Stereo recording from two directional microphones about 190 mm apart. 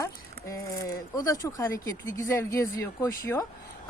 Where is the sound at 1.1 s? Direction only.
15° left (ahead or behind).